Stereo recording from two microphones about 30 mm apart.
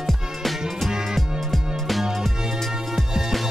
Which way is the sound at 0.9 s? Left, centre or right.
Centre.